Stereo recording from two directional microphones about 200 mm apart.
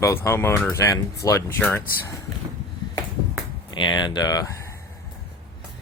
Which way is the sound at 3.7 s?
25° left (ahead or behind).